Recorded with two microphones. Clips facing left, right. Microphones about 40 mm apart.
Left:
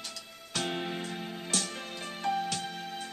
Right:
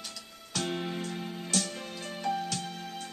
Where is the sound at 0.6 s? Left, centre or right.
Centre.